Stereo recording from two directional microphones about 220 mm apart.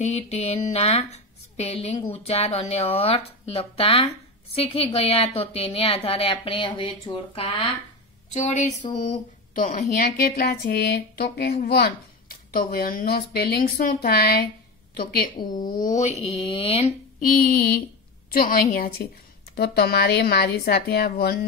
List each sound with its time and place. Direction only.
0.0 s a woman's voice: 30° left (ahead or behind)
17.2 s a woman's voice: 40° left (ahead or behind)